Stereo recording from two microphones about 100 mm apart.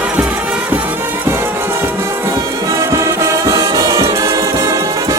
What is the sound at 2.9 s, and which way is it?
Music, 30° right (ahead or behind).